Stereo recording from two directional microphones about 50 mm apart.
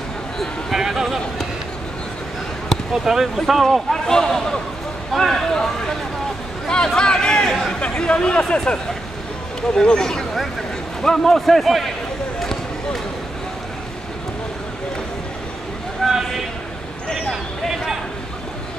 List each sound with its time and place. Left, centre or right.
0.7 s a man's voice: centre
2.9 s speech: centre
3.3 s a man's voice: centre
3.9 s a man's voice: centre
12.4 s basketball bounce: centre
16.0 s a sound: centre